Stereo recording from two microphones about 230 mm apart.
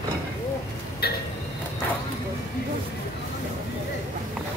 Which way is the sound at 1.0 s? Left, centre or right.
Left.